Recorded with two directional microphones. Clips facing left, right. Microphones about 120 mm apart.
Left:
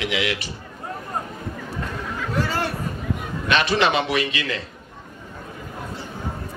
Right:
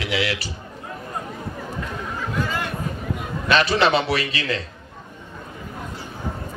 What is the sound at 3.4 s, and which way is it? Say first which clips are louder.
A man's voice: right 1 dB; 35° right (ahead or behind).